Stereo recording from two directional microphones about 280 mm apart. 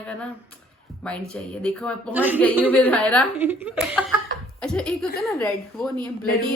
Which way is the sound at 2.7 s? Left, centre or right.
Centre.